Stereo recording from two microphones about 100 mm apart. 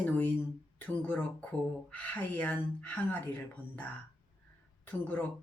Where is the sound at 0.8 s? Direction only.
15° left (ahead or behind).